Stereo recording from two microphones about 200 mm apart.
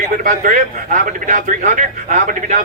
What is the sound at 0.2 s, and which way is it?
A man's voice, 45° right (ahead or behind).